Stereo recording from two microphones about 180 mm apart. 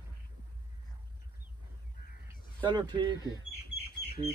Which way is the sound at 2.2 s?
25° right (ahead or behind).